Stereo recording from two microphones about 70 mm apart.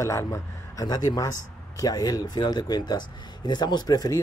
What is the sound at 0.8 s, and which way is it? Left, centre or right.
Speech, left.